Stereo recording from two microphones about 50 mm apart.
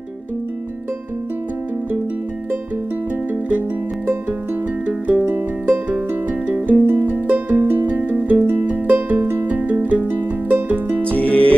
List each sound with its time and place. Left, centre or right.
3.4 s music: right
11.1 s music: left